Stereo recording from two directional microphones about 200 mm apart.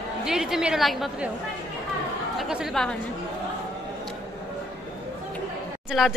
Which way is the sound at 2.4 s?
Centre (ahead or behind).